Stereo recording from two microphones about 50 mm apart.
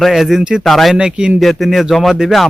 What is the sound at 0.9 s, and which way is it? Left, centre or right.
Speech, centre.